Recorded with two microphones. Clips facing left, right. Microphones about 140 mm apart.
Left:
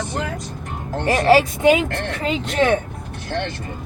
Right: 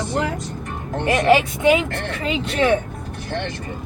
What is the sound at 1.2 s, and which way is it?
Speech, 35° left (ahead or behind).